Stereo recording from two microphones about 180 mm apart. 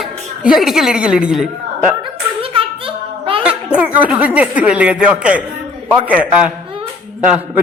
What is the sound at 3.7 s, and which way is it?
Speech, 10° right (ahead or behind).